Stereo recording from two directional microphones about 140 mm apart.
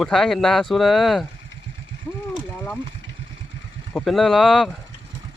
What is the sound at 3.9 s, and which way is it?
Speech, centre (ahead or behind).